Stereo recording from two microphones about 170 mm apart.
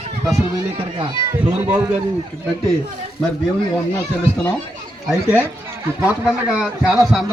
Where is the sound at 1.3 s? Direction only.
10° right (ahead or behind).